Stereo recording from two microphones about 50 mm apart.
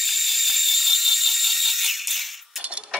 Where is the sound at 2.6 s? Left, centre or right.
Right.